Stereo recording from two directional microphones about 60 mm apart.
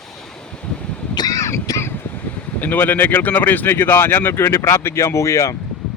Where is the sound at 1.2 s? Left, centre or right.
Left.